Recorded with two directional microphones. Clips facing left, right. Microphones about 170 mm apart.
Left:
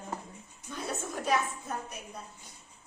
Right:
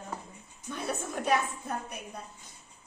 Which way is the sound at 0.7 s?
60° right (ahead or behind).